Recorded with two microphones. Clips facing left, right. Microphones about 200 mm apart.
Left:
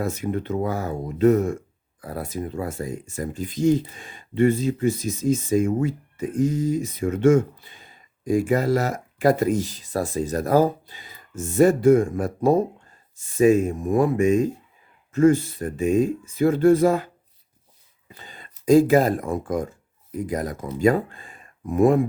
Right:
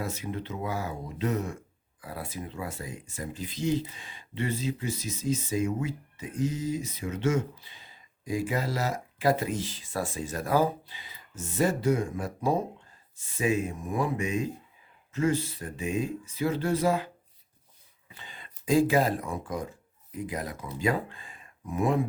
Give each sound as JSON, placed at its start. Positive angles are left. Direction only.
{"t": 0.0, "sound": "speech", "side_deg": 50}
{"t": 18.1, "sound": "speech", "side_deg": 40}